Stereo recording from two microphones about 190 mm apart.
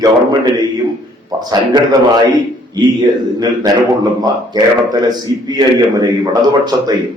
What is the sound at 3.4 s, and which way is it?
A man's voice, 20° right (ahead or behind).